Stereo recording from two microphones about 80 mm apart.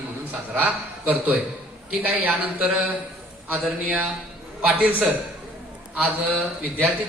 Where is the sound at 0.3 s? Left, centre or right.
Centre.